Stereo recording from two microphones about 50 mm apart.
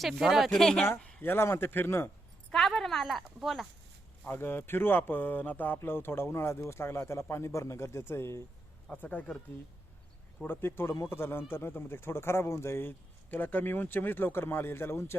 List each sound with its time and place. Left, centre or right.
0.0 s speech: centre
0.5 s speech: centre
1.2 s speech: left
2.5 s a woman's voice: centre
4.3 s speech: left
8.9 s speech: left
10.4 s speech: left
13.3 s speech: left